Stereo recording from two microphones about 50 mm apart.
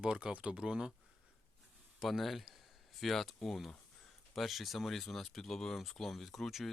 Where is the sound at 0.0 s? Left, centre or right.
Centre.